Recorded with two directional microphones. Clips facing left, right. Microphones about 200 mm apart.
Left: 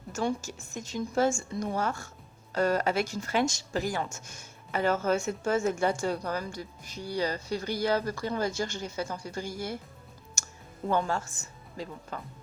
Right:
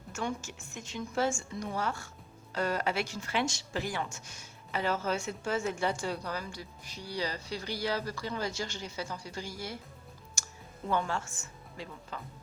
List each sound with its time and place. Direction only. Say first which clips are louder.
0.1 s speech: left 5 dB; 35° left (ahead or behind)
10.8 s a woman's voice: left 4 dB; 40° left (ahead or behind)